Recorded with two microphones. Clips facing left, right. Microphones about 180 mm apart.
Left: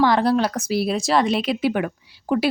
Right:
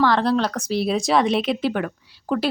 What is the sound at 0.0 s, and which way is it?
A woman's voice, 10° left (ahead or behind).